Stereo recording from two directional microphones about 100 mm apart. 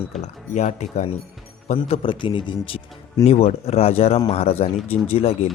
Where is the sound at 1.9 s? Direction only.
55° left (ahead or behind).